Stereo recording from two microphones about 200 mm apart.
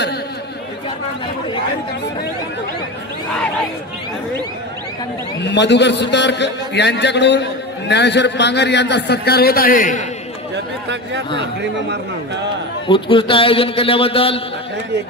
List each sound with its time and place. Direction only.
5.4 s a man's voice: 60° left (ahead or behind); by 10.0 s 40° left (ahead or behind)
12.8 s a man's voice: 25° left (ahead or behind)